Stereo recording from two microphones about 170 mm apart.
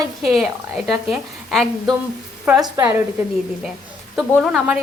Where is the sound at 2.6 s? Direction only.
25° right (ahead or behind).